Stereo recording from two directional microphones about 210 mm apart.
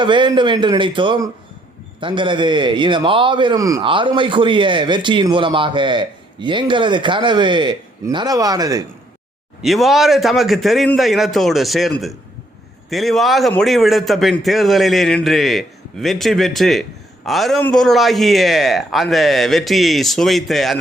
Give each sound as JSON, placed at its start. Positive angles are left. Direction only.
{"t": 0.0, "sound": "speech", "side_deg": -20}
{"t": 9.6, "sound": "a man's voice", "side_deg": 0}